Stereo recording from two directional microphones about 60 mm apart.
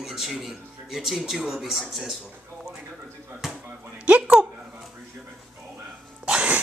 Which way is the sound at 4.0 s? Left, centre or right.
Right.